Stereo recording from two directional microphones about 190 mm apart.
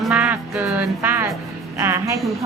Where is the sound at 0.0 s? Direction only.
5° right (ahead or behind).